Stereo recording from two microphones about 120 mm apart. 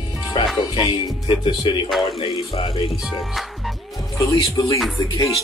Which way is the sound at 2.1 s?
50° left (ahead or behind).